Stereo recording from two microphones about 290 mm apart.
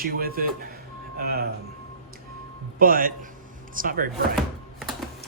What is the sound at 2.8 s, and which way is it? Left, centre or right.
Speech, right.